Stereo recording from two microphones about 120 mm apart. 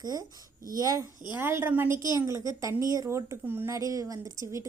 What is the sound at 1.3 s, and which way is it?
A woman's voice, 20° right (ahead or behind).